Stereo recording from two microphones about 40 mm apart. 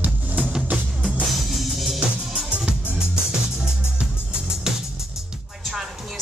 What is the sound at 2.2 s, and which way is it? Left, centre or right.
Music, centre.